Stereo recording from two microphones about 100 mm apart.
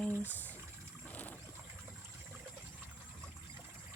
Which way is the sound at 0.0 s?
20° left (ahead or behind).